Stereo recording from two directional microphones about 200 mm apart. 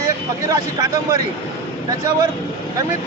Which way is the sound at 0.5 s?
15° right (ahead or behind).